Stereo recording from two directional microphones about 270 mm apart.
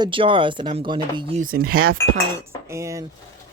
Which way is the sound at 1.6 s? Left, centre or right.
Right.